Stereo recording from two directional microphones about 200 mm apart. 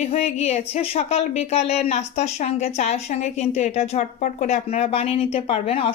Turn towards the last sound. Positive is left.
turn(degrees=30)  # may be behind; listen again after turning